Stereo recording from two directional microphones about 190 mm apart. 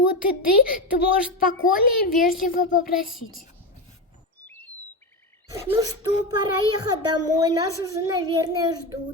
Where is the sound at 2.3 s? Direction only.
50° left (ahead or behind).